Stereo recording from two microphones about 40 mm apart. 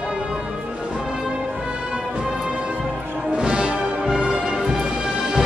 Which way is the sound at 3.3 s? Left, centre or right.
Right.